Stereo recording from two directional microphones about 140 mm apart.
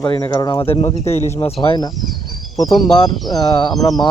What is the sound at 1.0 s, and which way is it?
Speech, 50° left (ahead or behind).